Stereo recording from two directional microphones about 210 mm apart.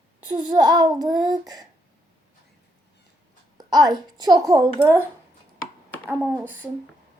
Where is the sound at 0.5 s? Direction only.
20° right (ahead or behind).